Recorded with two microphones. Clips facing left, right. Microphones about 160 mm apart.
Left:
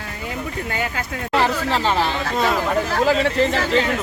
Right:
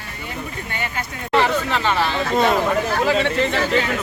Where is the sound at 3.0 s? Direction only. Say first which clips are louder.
Left 4 dB; 35° left (ahead or behind).